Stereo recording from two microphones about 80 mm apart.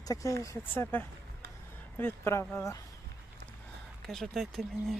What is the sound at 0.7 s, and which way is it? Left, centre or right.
Speech, left.